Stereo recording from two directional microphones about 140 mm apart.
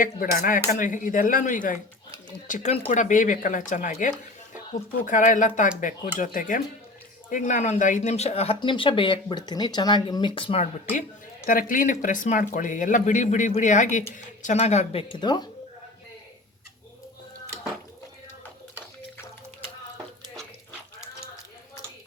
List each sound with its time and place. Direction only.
0.0 s speech: 80° left; by 10.6 s 40° left (ahead or behind)
11.4 s speech: 75° left (ahead or behind); by 15.4 s 30° left (ahead or behind)